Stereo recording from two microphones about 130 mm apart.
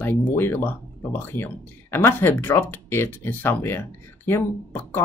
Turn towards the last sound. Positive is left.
turn(degrees=15)  # may be behind; listen again after turning